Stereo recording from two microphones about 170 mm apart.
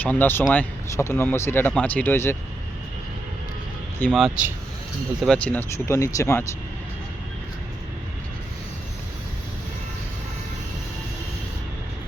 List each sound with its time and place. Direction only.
0.0 s speech: 10° left (ahead or behind)
4.0 s speech: centre (ahead or behind)
5.2 s speech: 5° left (ahead or behind)